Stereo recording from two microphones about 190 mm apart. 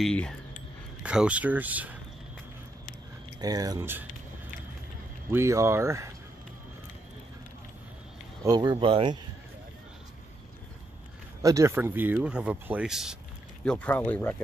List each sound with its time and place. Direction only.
0.0 s speech: 5° left (ahead or behind)
3.3 s speech: 20° right (ahead or behind)
5.3 s speech: 15° right (ahead or behind)
8.5 s speech: 25° right (ahead or behind)
11.4 s speech: 15° right (ahead or behind)
13.7 s speech: 10° left (ahead or behind)